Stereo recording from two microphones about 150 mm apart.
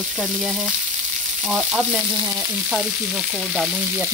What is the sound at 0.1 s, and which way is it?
Speech, centre (ahead or behind).